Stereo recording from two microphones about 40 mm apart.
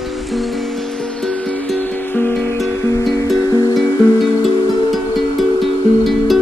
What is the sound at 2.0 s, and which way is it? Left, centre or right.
Music, left.